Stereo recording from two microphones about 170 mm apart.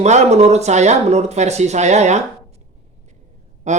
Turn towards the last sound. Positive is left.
turn(degrees=-45)  # may be behind; listen again after turning